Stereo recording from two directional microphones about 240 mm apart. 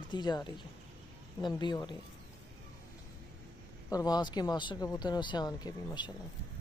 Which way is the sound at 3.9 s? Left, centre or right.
Centre.